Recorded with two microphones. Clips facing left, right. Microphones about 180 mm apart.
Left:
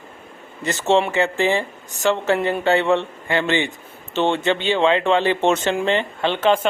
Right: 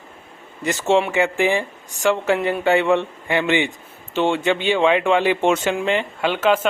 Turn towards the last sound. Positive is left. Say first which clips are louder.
# even
turn(degrees=-5)  # may be behind; listen again after turning